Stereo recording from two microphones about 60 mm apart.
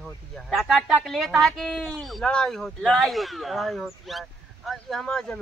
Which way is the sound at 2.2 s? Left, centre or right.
Centre.